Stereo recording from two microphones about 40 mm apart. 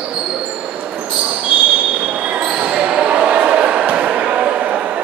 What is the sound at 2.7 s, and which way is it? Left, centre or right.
Basketball bounce, right.